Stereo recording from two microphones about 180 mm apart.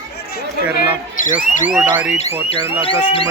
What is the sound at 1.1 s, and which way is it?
Alarm, 45° left (ahead or behind).